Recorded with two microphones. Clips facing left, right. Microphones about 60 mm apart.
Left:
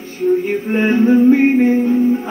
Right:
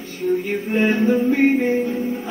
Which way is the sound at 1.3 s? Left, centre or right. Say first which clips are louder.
Left 5 dB; left.